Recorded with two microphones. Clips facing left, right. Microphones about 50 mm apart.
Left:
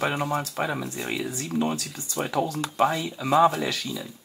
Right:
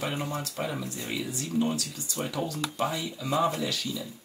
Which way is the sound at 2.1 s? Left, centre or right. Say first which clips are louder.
Left 6 dB; left.